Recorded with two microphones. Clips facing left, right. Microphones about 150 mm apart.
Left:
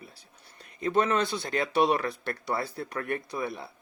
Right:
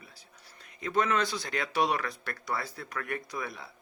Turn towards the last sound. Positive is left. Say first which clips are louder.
# left 5 dB
turn(degrees=25)  # may be behind; listen again after turning